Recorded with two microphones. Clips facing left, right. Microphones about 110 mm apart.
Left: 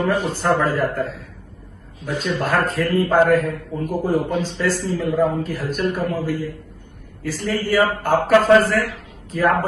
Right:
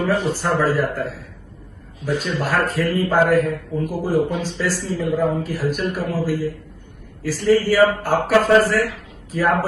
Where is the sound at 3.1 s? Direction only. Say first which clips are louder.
Even; centre (ahead or behind).